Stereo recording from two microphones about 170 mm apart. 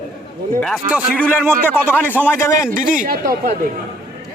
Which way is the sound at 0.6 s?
Centre (ahead or behind).